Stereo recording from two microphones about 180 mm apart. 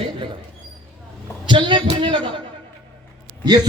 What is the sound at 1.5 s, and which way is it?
Speech, 25° right (ahead or behind).